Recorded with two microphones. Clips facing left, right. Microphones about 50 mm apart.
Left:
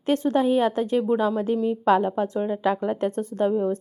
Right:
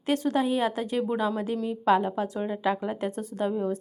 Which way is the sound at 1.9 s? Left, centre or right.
Left.